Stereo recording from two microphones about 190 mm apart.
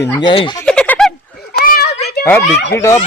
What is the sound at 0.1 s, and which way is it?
Speech, 25° left (ahead or behind).